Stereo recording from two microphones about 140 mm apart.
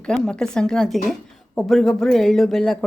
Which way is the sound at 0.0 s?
5° left (ahead or behind).